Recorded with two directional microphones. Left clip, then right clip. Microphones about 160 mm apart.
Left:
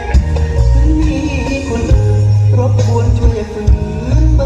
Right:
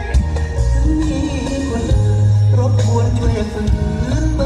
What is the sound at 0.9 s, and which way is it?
Music, 10° left (ahead or behind).